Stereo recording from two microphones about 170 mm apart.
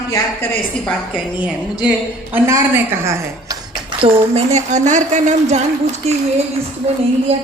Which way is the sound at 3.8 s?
35° right (ahead or behind).